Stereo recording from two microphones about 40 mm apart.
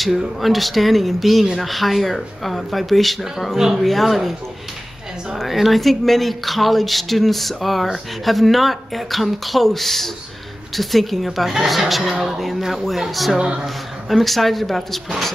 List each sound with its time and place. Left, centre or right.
0.4 s speech: centre
1.4 s speech: centre
1.7 s speech: centre
3.5 s speech: centre
3.8 s speech: centre
5.4 s speech: centre
13.4 s speech: right
14.0 s speech: centre